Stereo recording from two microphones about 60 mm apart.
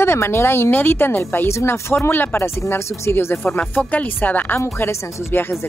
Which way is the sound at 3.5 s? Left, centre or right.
Left.